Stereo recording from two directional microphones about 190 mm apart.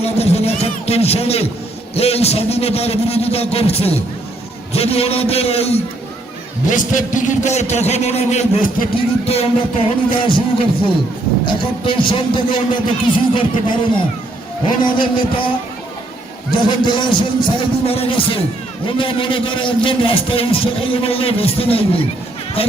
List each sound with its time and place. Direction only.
0.0 s a man's voice: 35° left (ahead or behind)
11.4 s a man's voice: 25° left (ahead or behind)
14.8 s a man's voice: 25° left (ahead or behind)
16.6 s a man's voice: 25° left (ahead or behind)